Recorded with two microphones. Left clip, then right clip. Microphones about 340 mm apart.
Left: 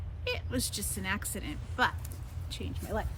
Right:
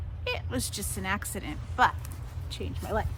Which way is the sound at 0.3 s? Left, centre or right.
Centre.